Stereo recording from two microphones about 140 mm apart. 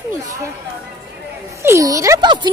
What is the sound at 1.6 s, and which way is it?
Speech, 20° right (ahead or behind).